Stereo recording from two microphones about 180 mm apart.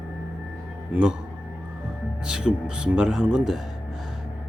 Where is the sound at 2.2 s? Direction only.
5° right (ahead or behind).